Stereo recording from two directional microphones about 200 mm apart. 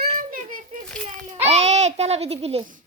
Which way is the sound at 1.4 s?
35° right (ahead or behind).